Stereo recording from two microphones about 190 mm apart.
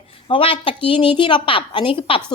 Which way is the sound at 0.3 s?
30° left (ahead or behind).